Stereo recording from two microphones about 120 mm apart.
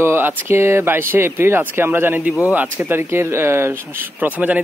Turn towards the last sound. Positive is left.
turn(degrees=-15)  # may be behind; listen again after turning